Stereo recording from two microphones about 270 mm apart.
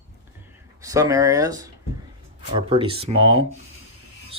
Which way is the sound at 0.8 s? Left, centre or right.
Centre.